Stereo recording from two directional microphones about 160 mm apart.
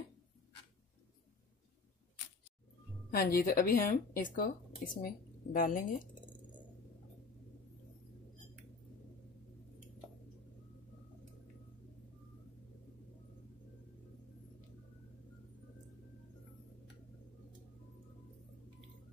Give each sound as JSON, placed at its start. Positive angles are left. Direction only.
{"t": 3.1, "sound": "a woman's voice", "side_deg": 70}